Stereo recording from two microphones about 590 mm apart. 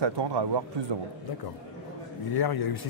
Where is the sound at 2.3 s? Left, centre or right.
Left.